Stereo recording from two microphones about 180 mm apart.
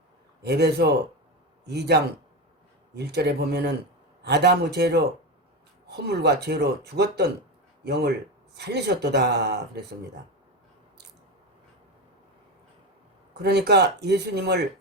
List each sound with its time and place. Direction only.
0.4 s speech: 65° right (ahead or behind)
6.1 s speech: 65° right (ahead or behind)
13.3 s speech: 65° right (ahead or behind)